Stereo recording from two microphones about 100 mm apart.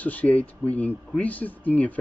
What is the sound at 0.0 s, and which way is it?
A man's voice, 15° left (ahead or behind).